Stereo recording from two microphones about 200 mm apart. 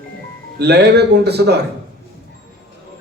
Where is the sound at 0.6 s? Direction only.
55° right (ahead or behind).